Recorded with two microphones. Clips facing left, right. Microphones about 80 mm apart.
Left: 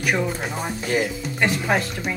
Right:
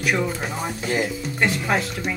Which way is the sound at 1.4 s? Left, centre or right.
Centre.